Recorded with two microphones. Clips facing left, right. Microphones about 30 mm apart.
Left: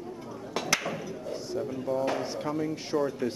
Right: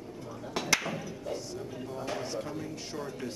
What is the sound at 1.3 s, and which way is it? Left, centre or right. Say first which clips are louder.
Speech: left 5 dB; centre.